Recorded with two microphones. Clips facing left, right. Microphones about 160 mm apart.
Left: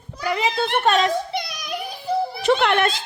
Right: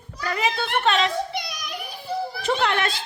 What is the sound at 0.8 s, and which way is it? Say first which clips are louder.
Speech: left 3 dB; 45° left (ahead or behind).